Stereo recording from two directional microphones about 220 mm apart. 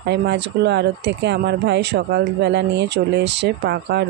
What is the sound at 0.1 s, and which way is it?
Speech, 50° right (ahead or behind).